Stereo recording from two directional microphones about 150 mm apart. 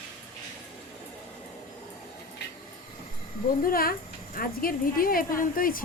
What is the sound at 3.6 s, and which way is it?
Speech, 75° left (ahead or behind).